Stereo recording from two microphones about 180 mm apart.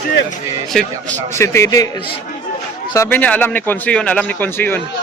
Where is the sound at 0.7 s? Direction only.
Centre (ahead or behind).